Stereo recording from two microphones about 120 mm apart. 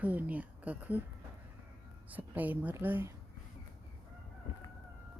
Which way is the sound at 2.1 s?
15° right (ahead or behind).